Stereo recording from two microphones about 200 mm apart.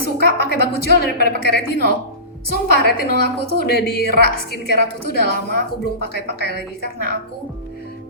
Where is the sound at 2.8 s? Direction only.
50° left (ahead or behind).